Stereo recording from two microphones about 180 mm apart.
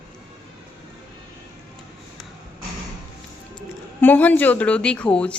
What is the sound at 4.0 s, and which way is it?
A woman's voice, 10° left (ahead or behind).